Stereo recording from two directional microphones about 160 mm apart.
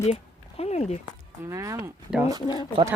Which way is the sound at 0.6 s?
45° left (ahead or behind).